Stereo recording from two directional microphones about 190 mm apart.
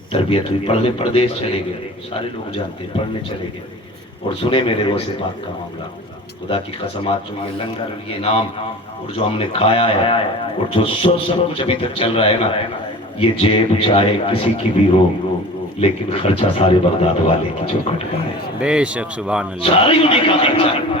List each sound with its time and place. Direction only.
0.1 s a man's voice: 30° left (ahead or behind)
4.4 s speech: 30° left (ahead or behind)
6.5 s speech: 30° left (ahead or behind)
8.2 s speech: 30° left (ahead or behind)
18.6 s speech: 5° right (ahead or behind)
19.6 s speech: 30° left (ahead or behind)